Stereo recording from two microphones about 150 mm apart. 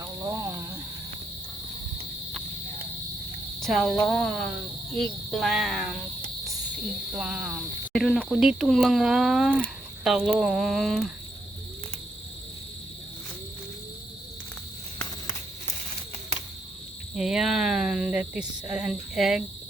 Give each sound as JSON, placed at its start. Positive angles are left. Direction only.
{"t": 0.0, "sound": "snake", "side_deg": -20}
{"t": 3.6, "sound": "speech", "side_deg": 0}
{"t": 7.2, "sound": "speech", "side_deg": -5}
{"t": 7.9, "sound": "speech", "side_deg": 5}
{"t": 17.2, "sound": "speech", "side_deg": -5}